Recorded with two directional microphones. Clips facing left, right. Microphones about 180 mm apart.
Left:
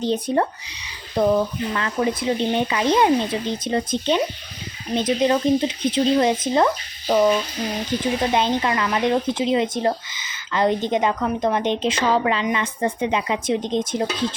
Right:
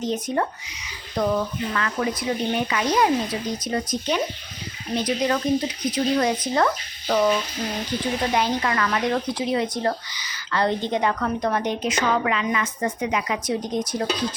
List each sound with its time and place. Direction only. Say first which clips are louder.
0.0 s speech: left 4 dB; 30° left (ahead or behind)